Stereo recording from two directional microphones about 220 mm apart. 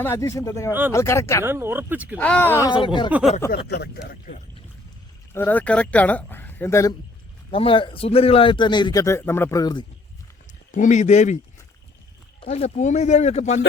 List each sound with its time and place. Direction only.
0.0 s speech: 10° left (ahead or behind)
0.7 s speech: 10° right (ahead or behind)
0.9 s speech: 15° left (ahead or behind)
1.5 s speech: 10° right (ahead or behind)
2.1 s speech: 5° left (ahead or behind)
2.6 s a man's voice: 20° left (ahead or behind)
3.1 s a sound: 5° right (ahead or behind)
3.7 s speech: 45° left (ahead or behind)
5.3 s speech: 10° left (ahead or behind)
7.5 s a man's voice: 25° left (ahead or behind)
10.7 s speech: 35° left (ahead or behind)
12.4 s speech: 30° left (ahead or behind)